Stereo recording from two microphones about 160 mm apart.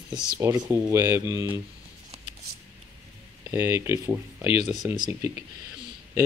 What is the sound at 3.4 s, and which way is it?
Speech, 15° right (ahead or behind).